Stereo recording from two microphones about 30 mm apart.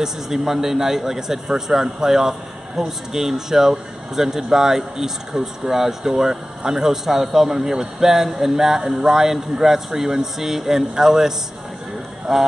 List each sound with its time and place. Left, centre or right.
0.0 s speech: centre